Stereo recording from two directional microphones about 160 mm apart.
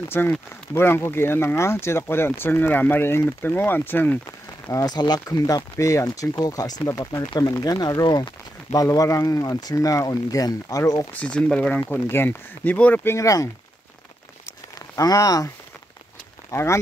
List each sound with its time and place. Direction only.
0.1 s speech: 15° left (ahead or behind)
4.6 s speech: 25° left (ahead or behind)
11.1 s speech: 5° left (ahead or behind)
15.0 s speech: 20° left (ahead or behind)